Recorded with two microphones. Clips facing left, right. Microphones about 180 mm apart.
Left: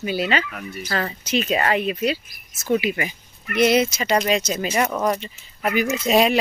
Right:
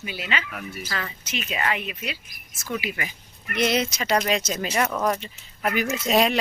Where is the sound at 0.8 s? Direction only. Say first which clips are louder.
Left 7 dB; 40° left (ahead or behind).